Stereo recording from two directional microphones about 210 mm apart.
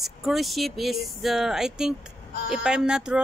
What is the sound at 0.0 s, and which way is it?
Speech, centre (ahead or behind).